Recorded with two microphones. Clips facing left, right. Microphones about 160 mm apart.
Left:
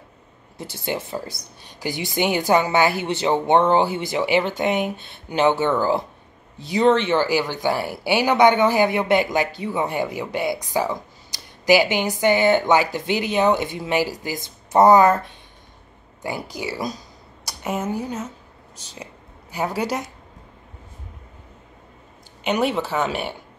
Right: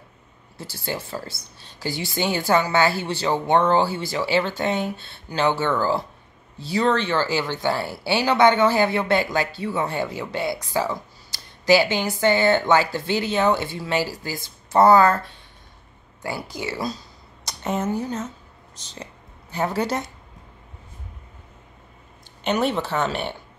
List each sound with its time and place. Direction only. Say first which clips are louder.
0.6 s speech: left 3 dB; 20° left (ahead or behind)
22.4 s speech: left 1 dB; 10° left (ahead or behind)